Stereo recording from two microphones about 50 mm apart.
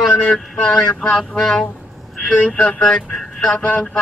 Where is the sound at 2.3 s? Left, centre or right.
Left.